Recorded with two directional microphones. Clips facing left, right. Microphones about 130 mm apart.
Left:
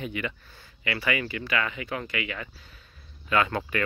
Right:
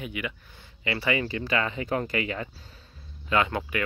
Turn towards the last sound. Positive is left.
turn(degrees=-10)  # may be behind; listen again after turning